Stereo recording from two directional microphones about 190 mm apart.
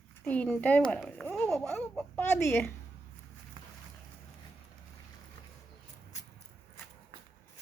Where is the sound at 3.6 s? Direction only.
25° right (ahead or behind).